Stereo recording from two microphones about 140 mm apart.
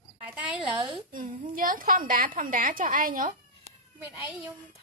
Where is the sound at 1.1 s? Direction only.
70° right (ahead or behind).